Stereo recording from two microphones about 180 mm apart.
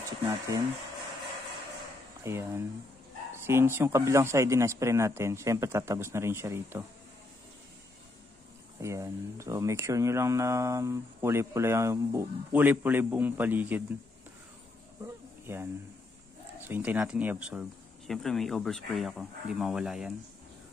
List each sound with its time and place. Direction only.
2.2 s speech: 15° right (ahead or behind)
8.7 s speech: 15° right (ahead or behind)
15.4 s speech: 10° right (ahead or behind)